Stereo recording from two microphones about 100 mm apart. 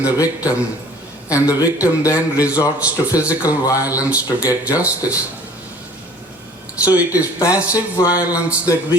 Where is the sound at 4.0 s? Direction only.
15° right (ahead or behind).